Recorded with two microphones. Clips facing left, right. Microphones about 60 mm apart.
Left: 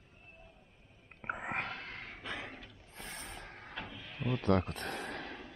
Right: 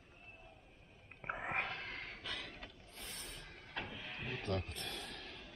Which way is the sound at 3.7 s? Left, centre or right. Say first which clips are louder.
Right 1 dB; centre.